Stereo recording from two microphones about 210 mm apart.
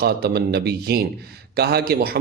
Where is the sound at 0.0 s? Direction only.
50° right (ahead or behind).